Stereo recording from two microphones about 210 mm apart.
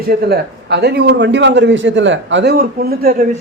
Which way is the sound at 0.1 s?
50° right (ahead or behind).